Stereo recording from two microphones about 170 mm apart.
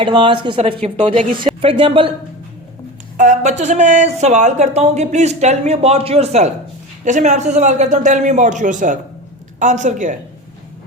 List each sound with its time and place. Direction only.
0.0 s speech: 30° right (ahead or behind)
3.2 s a woman's voice: 45° right (ahead or behind)